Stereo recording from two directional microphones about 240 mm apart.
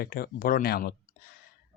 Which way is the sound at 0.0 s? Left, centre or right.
Left.